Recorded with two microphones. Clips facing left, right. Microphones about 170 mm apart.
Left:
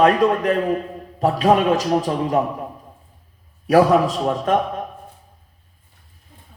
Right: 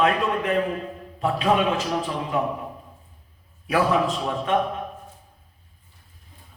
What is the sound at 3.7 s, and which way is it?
Speech, 40° left (ahead or behind).